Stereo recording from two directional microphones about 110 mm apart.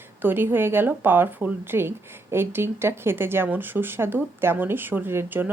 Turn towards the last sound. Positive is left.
turn(degrees=-20)  # may be behind; listen again after turning